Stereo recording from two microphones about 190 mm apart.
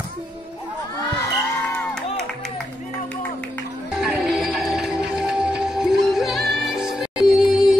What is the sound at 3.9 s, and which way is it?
Music, 5° right (ahead or behind).